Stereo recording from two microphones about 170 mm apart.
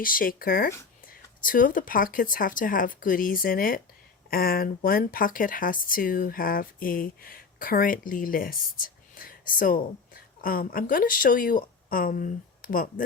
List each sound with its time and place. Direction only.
0.0 s speech: 55° left (ahead or behind)